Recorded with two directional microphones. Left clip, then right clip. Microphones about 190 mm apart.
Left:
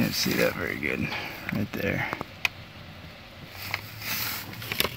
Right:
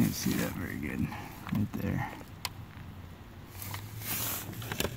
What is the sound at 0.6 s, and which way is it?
Speech, 15° left (ahead or behind).